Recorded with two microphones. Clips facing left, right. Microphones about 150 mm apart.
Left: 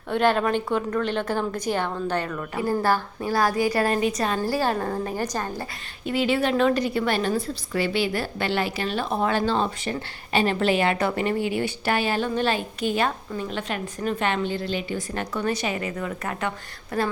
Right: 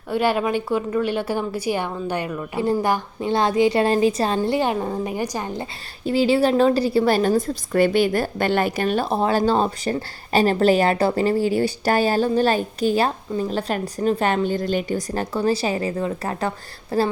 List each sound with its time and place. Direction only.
0.1 s a woman's voice: 10° right (ahead or behind); by 4.4 s 30° right (ahead or behind)
4.4 s a woman's voice: 20° right (ahead or behind)
6.1 s a woman's voice: 30° right (ahead or behind); by 9.0 s 50° right (ahead or behind)
9.0 s a woman's voice: 30° right (ahead or behind)